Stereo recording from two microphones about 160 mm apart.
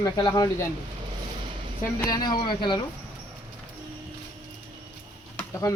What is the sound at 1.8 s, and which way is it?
Speech, 20° left (ahead or behind).